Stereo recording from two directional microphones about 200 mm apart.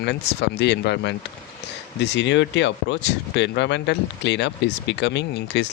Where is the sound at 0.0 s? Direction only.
60° left (ahead or behind).